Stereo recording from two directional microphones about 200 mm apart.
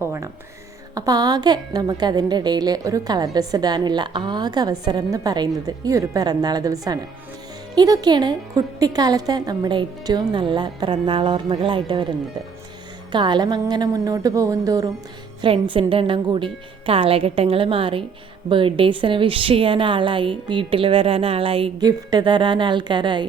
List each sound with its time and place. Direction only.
0.0 s a woman's voice: 15° right (ahead or behind)
13.1 s a woman's voice: 20° right (ahead or behind)